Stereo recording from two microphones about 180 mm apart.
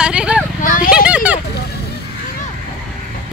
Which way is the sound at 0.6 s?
50° left (ahead or behind).